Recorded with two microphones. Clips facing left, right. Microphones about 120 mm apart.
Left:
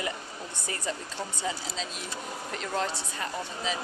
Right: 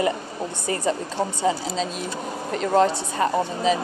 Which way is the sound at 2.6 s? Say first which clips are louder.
Right 13 dB; 55° right (ahead or behind).